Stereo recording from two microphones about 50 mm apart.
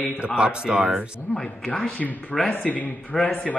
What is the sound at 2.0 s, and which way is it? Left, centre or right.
Mantra, centre.